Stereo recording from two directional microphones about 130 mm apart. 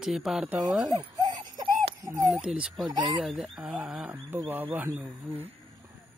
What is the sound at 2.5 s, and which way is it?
Speech, centre (ahead or behind).